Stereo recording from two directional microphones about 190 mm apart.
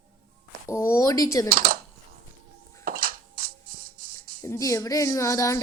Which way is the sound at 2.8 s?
50° right (ahead or behind).